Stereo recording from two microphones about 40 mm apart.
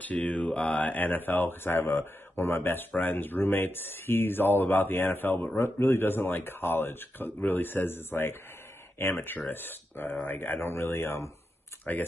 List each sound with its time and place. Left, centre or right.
0.0 s mantra: left
0.8 s speech: left
3.0 s speech: left
5.6 s speech: left
11.8 s speech: left